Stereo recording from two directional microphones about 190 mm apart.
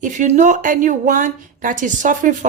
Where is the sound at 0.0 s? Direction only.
40° right (ahead or behind).